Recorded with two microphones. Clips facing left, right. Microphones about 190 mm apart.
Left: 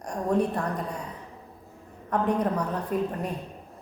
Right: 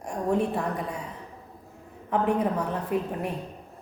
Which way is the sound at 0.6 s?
5° right (ahead or behind).